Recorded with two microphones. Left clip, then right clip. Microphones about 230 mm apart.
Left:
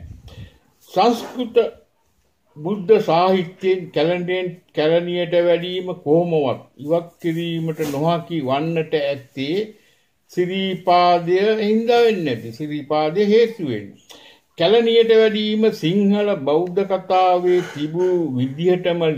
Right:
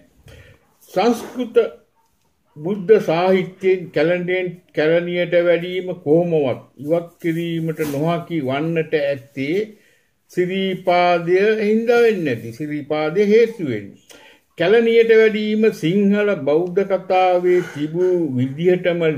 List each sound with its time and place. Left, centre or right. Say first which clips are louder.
0.9 s speech: left 1 dB; centre